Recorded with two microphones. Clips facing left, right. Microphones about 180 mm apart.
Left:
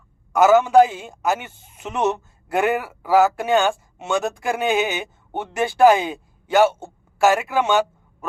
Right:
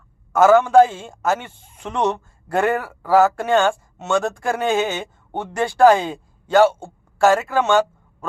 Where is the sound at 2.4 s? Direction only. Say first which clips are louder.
Right 1 dB; 15° left (ahead or behind).